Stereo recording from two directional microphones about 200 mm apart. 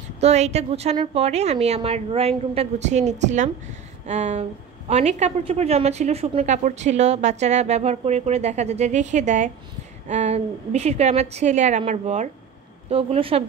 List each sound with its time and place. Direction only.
0.2 s a woman's voice: 35° right (ahead or behind)